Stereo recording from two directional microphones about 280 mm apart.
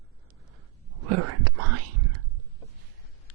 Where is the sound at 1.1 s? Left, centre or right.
Right.